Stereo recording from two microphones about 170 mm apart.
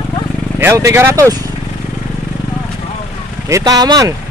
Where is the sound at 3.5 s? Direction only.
20° right (ahead or behind).